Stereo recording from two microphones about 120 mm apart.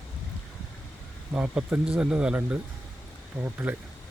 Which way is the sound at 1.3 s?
10° right (ahead or behind).